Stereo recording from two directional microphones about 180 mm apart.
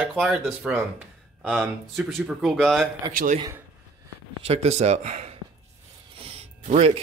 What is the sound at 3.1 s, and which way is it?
Speech, 45° right (ahead or behind).